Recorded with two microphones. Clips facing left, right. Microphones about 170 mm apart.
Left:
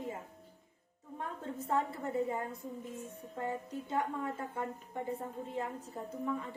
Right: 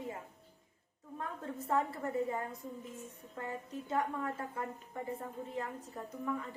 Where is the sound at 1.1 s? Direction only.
25° left (ahead or behind).